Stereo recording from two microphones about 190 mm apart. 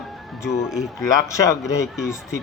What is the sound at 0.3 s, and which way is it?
Speech, centre (ahead or behind).